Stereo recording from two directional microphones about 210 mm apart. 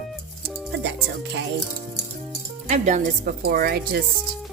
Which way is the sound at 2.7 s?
35° right (ahead or behind).